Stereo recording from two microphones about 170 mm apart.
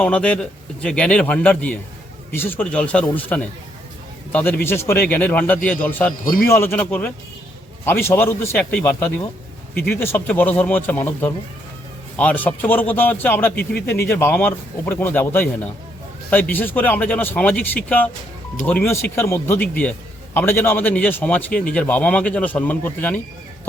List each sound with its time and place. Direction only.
0.0 s a man's voice: 5° left (ahead or behind)
6.2 s a man's voice: 55° left (ahead or behind)
6.5 s a man's voice: 15° left (ahead or behind)
9.7 s a man's voice: 65° left (ahead or behind)
10.0 s a man's voice: 15° left (ahead or behind)